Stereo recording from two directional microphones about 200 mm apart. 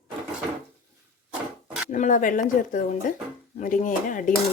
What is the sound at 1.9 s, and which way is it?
Speech, 40° left (ahead or behind).